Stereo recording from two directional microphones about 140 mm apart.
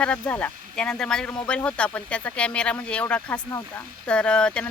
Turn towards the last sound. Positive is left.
turn(degrees=5)  # may be behind; listen again after turning